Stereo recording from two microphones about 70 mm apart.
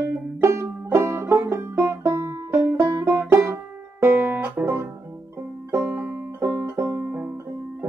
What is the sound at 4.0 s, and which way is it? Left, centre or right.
Music, right.